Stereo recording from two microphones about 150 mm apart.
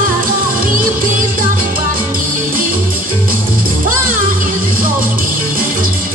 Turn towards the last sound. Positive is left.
turn(degrees=-70)  # may be behind; listen again after turning